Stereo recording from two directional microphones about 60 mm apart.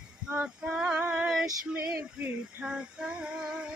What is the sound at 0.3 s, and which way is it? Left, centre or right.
Female singing, centre.